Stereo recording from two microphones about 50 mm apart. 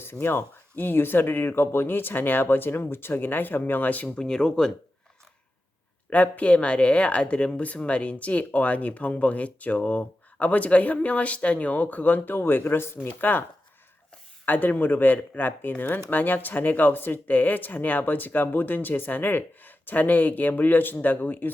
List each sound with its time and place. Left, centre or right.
0.0 s speech: left; by 4.7 s centre
6.1 s speech: left
14.4 s speech: left